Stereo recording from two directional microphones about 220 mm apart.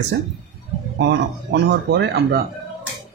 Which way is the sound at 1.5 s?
50° right (ahead or behind).